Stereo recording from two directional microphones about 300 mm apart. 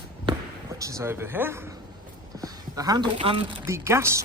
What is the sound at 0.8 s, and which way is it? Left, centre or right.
A man's voice, centre.